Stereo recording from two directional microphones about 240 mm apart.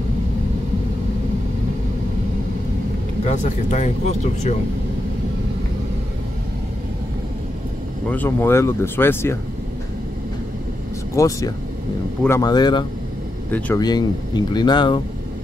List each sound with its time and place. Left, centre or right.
3.3 s speech: left
8.1 s speech: centre
11.1 s speech: centre
13.5 s speech: centre